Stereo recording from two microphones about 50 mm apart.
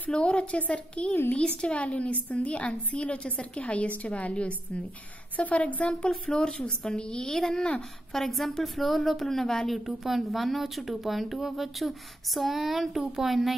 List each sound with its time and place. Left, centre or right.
0.1 s a woman's voice: centre
5.9 s a woman's voice: centre